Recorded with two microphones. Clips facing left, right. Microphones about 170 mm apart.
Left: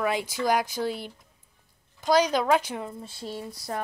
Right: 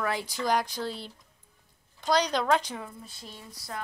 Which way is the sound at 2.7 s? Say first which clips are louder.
Left 5 dB; 25° left (ahead or behind).